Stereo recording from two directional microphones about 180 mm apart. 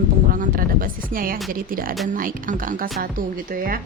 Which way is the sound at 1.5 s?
50° right (ahead or behind).